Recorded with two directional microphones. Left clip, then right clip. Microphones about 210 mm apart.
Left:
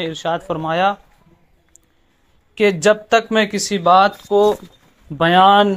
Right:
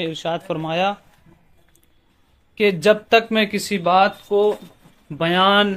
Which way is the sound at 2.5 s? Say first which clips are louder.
Left 2 dB; 10° left (ahead or behind).